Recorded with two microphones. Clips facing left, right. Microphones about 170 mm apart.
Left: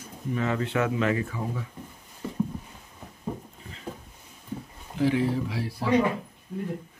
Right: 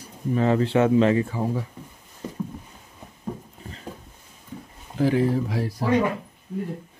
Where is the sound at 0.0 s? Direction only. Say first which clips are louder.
Right 6 dB; 35° right (ahead or behind).